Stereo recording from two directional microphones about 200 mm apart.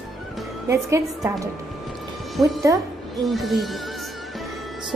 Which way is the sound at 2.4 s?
Centre (ahead or behind).